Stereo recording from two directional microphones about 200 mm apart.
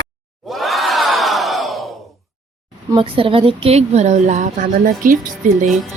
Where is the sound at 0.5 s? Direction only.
Centre (ahead or behind).